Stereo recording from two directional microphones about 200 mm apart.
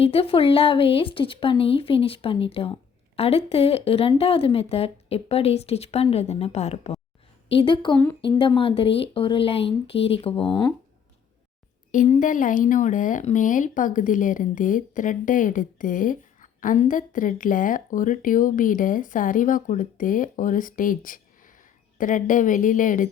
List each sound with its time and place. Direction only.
0.0 s speech: 30° left (ahead or behind)
11.9 s speech: 35° left (ahead or behind)